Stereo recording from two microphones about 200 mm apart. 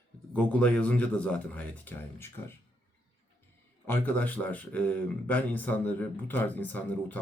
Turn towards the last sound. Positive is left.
turn(degrees=5)  # may be behind; listen again after turning